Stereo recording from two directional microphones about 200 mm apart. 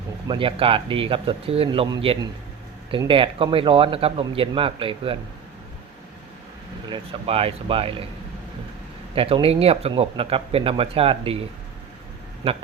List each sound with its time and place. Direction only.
0.3 s speech: 25° right (ahead or behind)
6.9 s speech: 30° right (ahead or behind)
9.1 s speech: 30° right (ahead or behind)
12.4 s speech: 30° right (ahead or behind)